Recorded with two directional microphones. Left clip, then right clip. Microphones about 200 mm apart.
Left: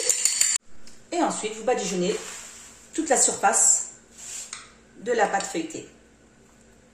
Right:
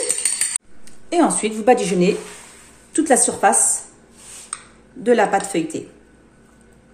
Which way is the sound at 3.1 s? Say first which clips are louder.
Right 5 dB; 40° right (ahead or behind).